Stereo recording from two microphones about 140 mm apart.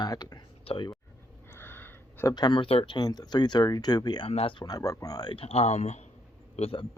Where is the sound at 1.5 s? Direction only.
15° left (ahead or behind).